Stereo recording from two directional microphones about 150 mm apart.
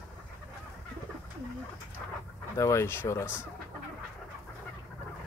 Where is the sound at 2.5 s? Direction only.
20° left (ahead or behind).